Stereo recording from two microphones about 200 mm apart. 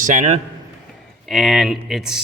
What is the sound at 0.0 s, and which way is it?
Speech, 40° right (ahead or behind).